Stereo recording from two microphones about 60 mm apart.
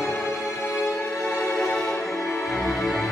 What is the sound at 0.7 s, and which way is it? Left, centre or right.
Music, left.